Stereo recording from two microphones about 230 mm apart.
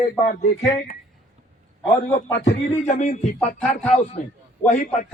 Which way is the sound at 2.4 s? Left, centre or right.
Left.